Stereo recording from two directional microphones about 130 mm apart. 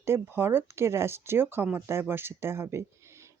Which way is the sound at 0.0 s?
20° right (ahead or behind).